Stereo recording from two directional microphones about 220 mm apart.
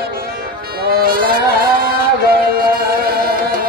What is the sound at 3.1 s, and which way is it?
Music, 45° right (ahead or behind).